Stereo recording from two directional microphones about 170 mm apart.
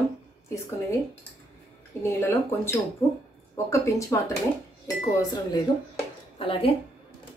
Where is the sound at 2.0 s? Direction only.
15° left (ahead or behind).